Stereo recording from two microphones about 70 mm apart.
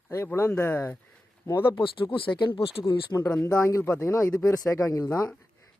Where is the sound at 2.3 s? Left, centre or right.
Left.